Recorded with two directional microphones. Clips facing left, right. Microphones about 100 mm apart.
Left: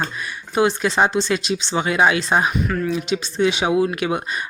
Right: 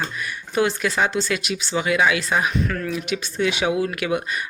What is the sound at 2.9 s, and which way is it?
Speech, 25° left (ahead or behind).